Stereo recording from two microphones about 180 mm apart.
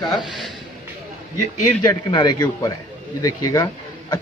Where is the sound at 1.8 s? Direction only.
25° left (ahead or behind).